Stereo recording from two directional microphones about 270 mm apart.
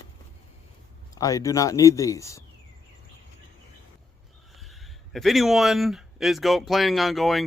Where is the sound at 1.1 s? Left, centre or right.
Centre.